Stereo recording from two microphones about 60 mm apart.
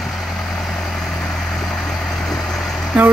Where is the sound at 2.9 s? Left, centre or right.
Right.